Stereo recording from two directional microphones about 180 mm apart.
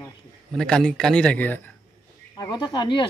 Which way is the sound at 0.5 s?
5° left (ahead or behind).